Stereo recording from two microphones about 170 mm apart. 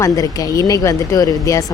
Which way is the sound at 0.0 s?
20° left (ahead or behind).